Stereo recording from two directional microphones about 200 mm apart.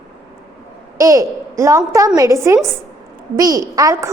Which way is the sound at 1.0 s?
15° right (ahead or behind).